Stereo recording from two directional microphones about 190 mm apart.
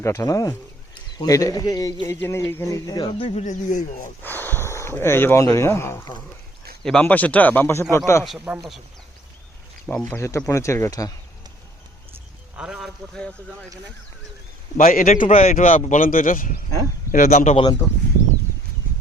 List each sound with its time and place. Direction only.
0.0 s a man's voice: 15° left (ahead or behind); by 4.1 s 40° left (ahead or behind)
4.2 s speech: 10° left (ahead or behind)
8.2 s speech: centre (ahead or behind)
9.8 s speech: 10° left (ahead or behind)
12.5 s speech: 5° right (ahead or behind)
14.8 s a man's voice: 45° left (ahead or behind)